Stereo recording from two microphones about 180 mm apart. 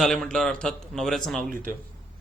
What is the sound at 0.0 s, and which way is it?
Speech, centre (ahead or behind).